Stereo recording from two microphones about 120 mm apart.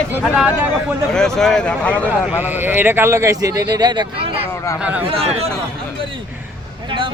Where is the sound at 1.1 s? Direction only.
5° left (ahead or behind).